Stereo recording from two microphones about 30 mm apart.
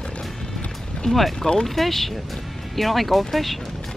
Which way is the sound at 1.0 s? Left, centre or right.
Centre.